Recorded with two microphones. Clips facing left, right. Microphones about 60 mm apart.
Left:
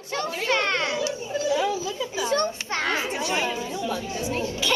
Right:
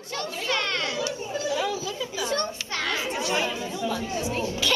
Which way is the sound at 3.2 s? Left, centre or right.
Centre.